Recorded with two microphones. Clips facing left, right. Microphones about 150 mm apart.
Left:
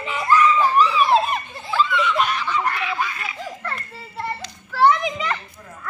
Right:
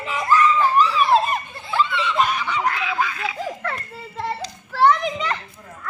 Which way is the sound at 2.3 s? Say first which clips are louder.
Even; 75° right (ahead or behind).